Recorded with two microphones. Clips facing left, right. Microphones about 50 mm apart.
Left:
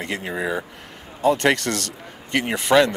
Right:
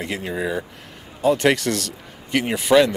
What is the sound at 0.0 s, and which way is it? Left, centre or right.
Speech, centre.